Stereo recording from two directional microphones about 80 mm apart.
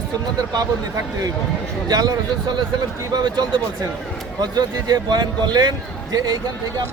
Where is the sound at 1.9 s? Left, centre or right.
Right.